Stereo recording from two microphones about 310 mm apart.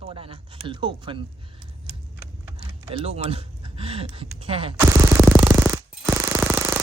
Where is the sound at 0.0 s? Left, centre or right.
Centre.